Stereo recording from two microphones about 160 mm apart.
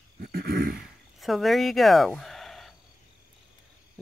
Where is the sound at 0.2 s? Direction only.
75° right (ahead or behind).